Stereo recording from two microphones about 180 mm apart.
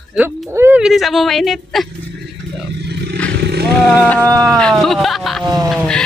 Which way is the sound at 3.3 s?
60° right (ahead or behind).